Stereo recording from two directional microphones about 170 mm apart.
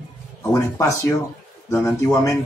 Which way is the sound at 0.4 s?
15° left (ahead or behind).